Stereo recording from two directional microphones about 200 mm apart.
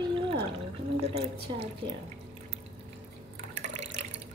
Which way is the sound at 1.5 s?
25° right (ahead or behind).